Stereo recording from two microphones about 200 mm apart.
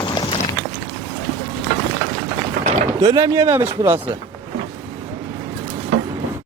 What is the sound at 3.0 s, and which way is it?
Speech, 15° right (ahead or behind).